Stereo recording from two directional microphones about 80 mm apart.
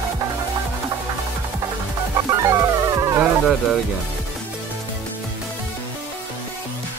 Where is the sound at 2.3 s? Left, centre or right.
Right.